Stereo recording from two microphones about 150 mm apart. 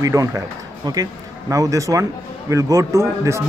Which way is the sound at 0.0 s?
20° right (ahead or behind).